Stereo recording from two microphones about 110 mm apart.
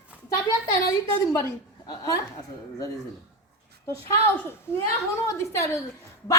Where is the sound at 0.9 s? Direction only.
30° left (ahead or behind).